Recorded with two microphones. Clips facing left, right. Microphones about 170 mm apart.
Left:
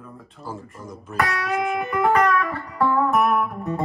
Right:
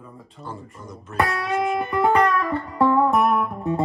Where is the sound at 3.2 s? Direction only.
Centre (ahead or behind).